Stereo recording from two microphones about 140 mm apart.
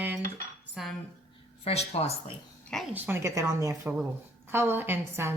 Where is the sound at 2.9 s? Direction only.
15° right (ahead or behind).